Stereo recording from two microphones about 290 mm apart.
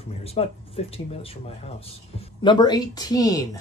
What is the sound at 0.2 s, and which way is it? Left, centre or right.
Speech, left.